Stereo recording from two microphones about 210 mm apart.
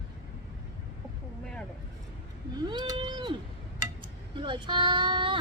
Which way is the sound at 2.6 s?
20° right (ahead or behind).